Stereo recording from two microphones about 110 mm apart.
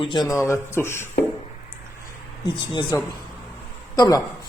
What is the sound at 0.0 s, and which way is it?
Speech, 45° left (ahead or behind).